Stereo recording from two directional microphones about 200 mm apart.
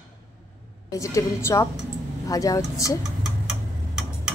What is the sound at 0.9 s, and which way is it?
A woman's voice, 15° left (ahead or behind).